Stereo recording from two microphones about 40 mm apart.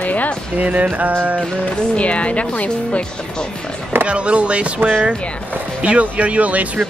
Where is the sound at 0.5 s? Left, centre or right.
Right.